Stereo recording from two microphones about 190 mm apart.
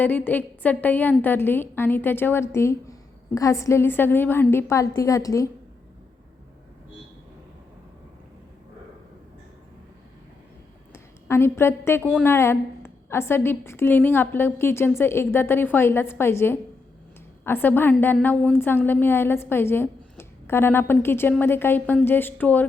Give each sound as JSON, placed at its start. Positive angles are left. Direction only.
{"t": 0.0, "sound": "a woman's voice", "side_deg": 10}
{"t": 11.3, "sound": "a woman's voice", "side_deg": 15}